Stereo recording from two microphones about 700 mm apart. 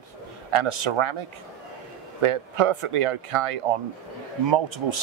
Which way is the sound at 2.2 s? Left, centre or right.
Right.